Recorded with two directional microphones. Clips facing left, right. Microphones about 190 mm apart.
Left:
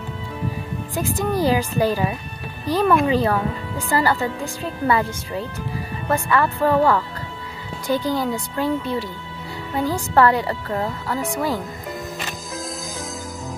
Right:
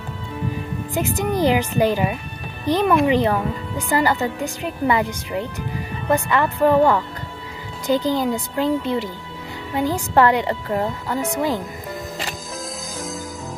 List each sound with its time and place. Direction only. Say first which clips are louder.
0.9 s a woman's voice: right 1 dB; 20° right (ahead or behind)